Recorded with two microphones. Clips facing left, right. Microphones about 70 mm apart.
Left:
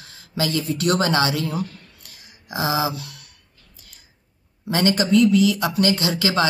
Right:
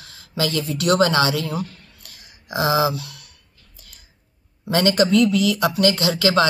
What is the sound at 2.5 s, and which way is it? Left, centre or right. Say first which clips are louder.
Speech: right 3 dB; centre.